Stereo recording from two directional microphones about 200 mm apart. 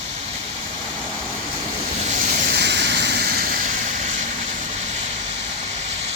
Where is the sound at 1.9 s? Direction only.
35° right (ahead or behind).